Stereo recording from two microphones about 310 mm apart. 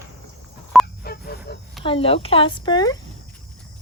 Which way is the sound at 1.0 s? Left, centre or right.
Left.